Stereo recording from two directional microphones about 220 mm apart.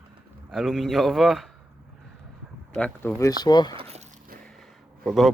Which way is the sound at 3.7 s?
25° right (ahead or behind).